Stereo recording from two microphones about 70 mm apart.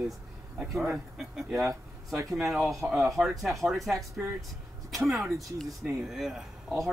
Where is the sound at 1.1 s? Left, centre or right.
Centre.